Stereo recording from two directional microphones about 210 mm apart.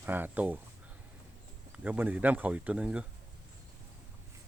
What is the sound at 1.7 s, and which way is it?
Speech, 10° right (ahead or behind).